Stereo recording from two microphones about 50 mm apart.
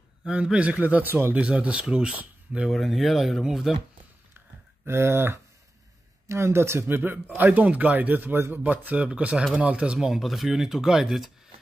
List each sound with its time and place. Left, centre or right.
0.3 s speech: right
1.0 s speech: right
1.3 s speech: right
2.7 s speech: centre
4.8 s speech: right
7.0 s a man's voice: right
8.6 s speech: right
9.9 s speech: centre